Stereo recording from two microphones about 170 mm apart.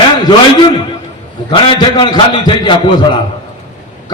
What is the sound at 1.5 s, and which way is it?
A man's voice, 30° left (ahead or behind).